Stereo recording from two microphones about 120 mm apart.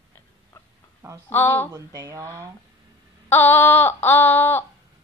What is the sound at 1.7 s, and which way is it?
Mantra, 30° right (ahead or behind).